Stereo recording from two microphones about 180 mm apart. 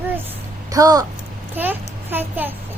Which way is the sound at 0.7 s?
20° right (ahead or behind).